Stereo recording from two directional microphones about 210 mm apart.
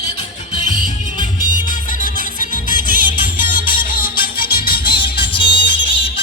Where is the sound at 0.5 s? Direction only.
20° left (ahead or behind).